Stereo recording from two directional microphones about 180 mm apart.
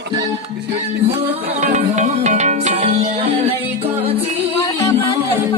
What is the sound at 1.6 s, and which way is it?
Music, 40° right (ahead or behind).